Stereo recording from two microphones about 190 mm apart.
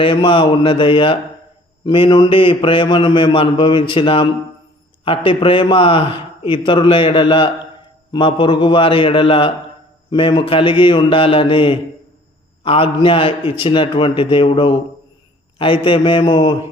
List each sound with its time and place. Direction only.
0.0 s a man's voice: 25° left (ahead or behind)